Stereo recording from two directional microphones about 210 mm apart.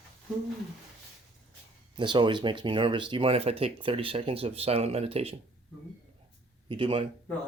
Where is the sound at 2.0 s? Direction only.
20° right (ahead or behind).